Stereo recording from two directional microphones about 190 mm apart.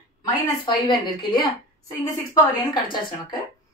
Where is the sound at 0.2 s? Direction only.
25° left (ahead or behind).